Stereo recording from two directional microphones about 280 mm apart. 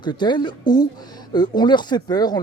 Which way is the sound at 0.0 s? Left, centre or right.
Centre.